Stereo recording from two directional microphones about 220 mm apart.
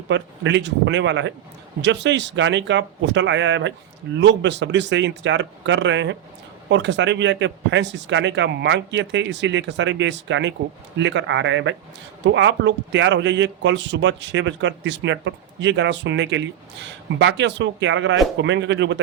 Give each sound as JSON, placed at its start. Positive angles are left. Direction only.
{"t": 0.1, "sound": "speech", "side_deg": -55}